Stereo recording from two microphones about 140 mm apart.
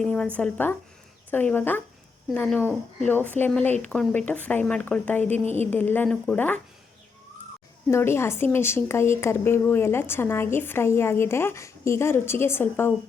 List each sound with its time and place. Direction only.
0.0 s a sound: 5° left (ahead or behind)
0.3 s speech: 10° left (ahead or behind)
7.9 s speech: 20° left (ahead or behind)